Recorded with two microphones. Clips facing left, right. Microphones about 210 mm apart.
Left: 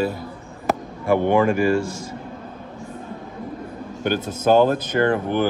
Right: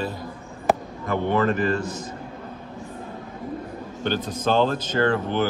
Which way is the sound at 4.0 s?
10° left (ahead or behind).